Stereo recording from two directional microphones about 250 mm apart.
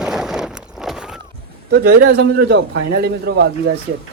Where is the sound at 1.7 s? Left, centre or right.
Right.